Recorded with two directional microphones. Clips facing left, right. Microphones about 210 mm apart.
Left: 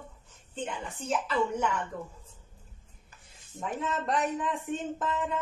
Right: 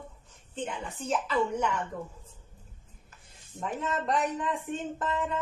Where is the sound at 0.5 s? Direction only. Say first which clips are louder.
Right 1 dB; centre (ahead or behind).